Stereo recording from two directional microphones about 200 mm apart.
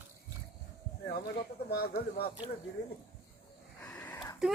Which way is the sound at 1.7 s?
50° left (ahead or behind).